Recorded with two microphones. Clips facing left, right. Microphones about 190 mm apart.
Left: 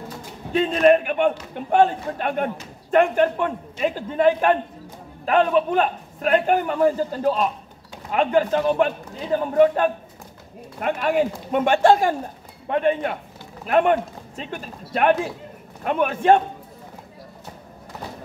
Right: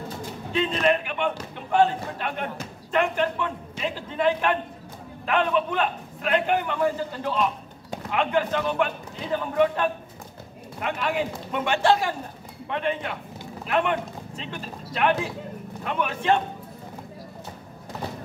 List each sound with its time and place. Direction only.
0.5 s a man's voice: 50° left (ahead or behind)